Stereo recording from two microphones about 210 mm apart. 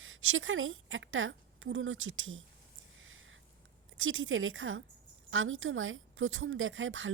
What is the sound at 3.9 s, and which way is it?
A woman's voice, 70° right (ahead or behind).